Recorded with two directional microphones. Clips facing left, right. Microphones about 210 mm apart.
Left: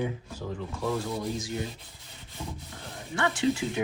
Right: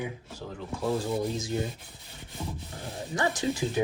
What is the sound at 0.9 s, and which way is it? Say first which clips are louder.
Rub: right 2 dB; 25° right (ahead or behind).